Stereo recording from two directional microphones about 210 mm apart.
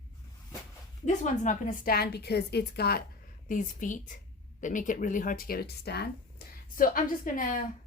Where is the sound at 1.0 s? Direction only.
35° left (ahead or behind).